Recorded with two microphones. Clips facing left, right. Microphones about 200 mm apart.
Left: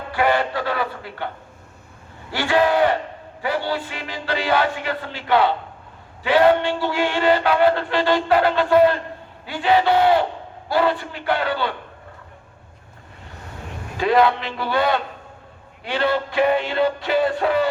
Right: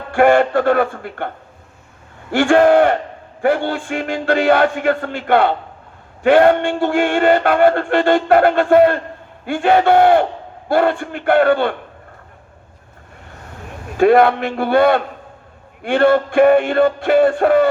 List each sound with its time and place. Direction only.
0.1 s music: 50° right (ahead or behind)
2.3 s music: 50° right (ahead or behind)
13.9 s music: 50° right (ahead or behind)